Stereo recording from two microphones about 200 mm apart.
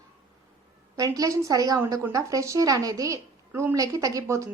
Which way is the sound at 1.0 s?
15° right (ahead or behind).